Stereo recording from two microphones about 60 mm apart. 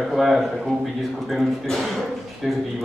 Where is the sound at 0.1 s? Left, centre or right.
Centre.